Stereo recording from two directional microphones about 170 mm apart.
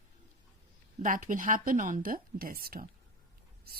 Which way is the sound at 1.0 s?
50° right (ahead or behind).